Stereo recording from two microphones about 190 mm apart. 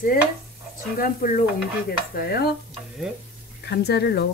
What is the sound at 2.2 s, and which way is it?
Speech, 55° left (ahead or behind).